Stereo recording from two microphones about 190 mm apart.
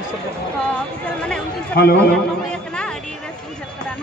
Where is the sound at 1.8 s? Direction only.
55° left (ahead or behind).